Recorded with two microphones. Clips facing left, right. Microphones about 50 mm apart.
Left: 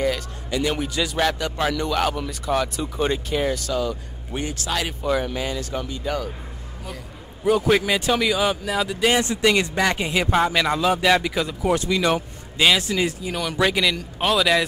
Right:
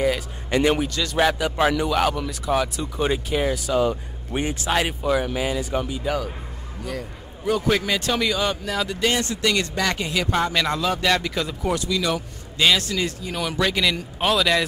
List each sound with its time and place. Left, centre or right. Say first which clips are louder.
0.5 s a man's voice: right 4 dB; right
0.8 s speech: left 2 dB; centre
1.1 s speech: right 5 dB; centre
3.8 s speech: right 4 dB; right
5.0 s speech: right 1 dB; centre
7.4 s speech: left 3 dB; centre
9.2 s speech: left 3 dB; left
11.7 s speech: left 4 dB; left
12.5 s speech: left 1 dB; centre